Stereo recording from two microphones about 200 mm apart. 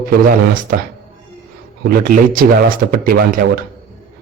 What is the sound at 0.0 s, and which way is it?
Speech, 45° right (ahead or behind).